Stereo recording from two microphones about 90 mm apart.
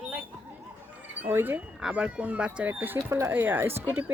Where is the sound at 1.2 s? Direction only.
20° right (ahead or behind).